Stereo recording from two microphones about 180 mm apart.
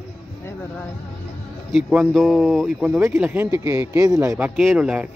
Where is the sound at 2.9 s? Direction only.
15° right (ahead or behind).